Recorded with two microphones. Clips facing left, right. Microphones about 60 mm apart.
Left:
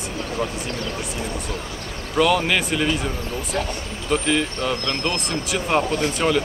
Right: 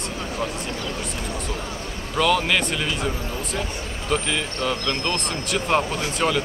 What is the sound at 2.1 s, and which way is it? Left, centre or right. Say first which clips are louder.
Speech: left 2 dB; centre.